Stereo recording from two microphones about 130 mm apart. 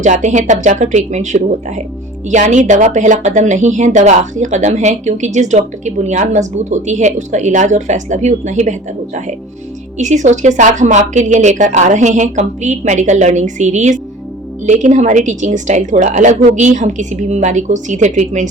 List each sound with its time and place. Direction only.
0.0 s a woman's voice: 65° right (ahead or behind)
10.0 s a woman's voice: 70° right (ahead or behind)